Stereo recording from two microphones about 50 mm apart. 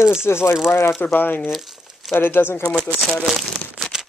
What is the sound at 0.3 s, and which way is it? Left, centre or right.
Speech, left.